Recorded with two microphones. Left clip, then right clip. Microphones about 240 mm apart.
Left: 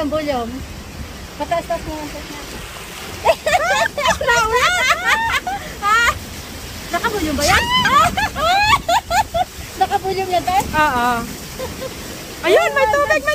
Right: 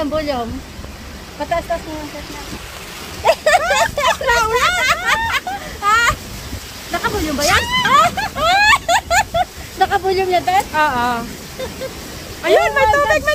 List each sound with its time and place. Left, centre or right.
0.0 s speech: centre
3.3 s a sound: right
4.1 s speech: centre
4.8 s a sound: centre
6.9 s speech: centre
7.6 s speech: centre
8.4 s a sound: right
10.7 s speech: centre
12.4 s speech: centre